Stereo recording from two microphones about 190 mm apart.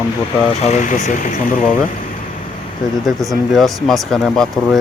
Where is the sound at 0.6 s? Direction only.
40° left (ahead or behind).